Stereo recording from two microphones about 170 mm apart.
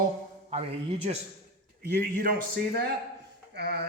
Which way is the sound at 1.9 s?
60° right (ahead or behind).